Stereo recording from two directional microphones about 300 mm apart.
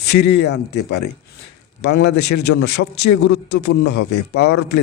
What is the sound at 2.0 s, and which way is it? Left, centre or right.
Speech, left.